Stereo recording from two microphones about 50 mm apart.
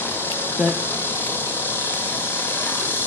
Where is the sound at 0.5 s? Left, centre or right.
Left.